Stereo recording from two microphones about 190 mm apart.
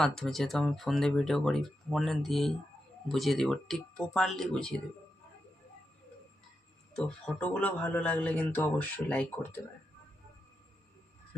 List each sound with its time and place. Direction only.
0.0 s speech: centre (ahead or behind)
6.9 s speech: 5° left (ahead or behind)